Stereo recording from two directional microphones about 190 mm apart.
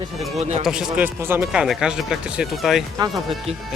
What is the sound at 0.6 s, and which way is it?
Speech, 5° right (ahead or behind).